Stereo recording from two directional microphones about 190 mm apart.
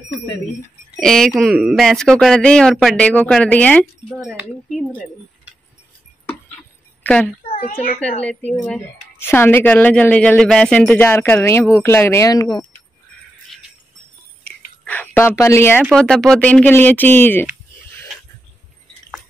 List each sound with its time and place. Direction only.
0.9 s speech: centre (ahead or behind)
4.3 s speech: 10° right (ahead or behind)
6.2 s a sound: 5° left (ahead or behind)
7.5 s a child's voice: 50° left (ahead or behind)
8.6 s speech: 10° left (ahead or behind)
14.4 s a sound: 10° left (ahead or behind)
15.8 s speech: 5° left (ahead or behind)